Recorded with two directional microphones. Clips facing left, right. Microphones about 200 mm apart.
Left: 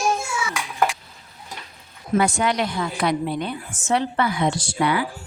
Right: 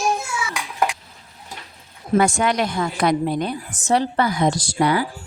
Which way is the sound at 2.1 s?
45° right (ahead or behind).